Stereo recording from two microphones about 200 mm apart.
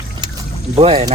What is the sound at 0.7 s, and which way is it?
Speech, 30° right (ahead or behind).